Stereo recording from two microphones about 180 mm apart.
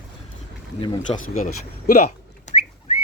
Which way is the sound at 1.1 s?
45° left (ahead or behind).